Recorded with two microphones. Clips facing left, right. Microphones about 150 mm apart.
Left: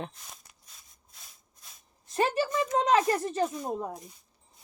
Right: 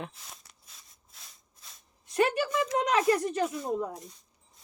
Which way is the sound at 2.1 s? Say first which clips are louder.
Right 1 dB; 35° left (ahead or behind).